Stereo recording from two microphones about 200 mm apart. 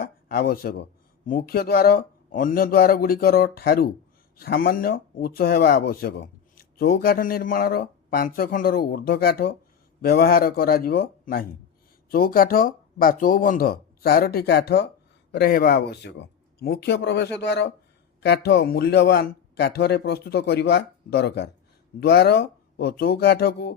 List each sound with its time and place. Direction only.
0.0 s speech: 50° left (ahead or behind)